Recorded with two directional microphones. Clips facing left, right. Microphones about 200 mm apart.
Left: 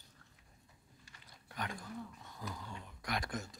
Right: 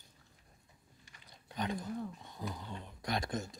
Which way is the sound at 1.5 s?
20° right (ahead or behind).